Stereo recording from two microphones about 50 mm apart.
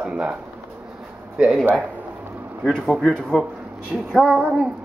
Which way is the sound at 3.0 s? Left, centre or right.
Centre.